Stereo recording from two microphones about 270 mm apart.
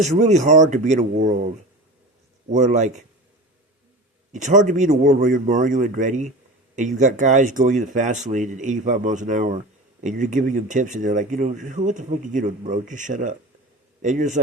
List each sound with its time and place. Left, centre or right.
0.0 s speech: right
2.5 s speech: right
4.3 s speech: right